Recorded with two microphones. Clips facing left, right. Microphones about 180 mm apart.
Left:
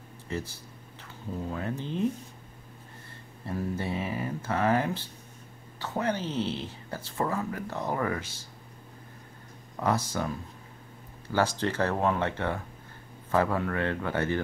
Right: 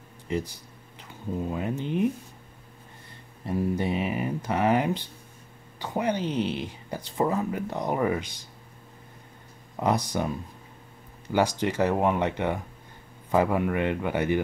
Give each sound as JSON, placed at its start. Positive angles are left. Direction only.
{"t": 0.3, "sound": "speech", "side_deg": -15}
{"t": 3.4, "sound": "speech", "side_deg": -15}
{"t": 9.8, "sound": "speech", "side_deg": -15}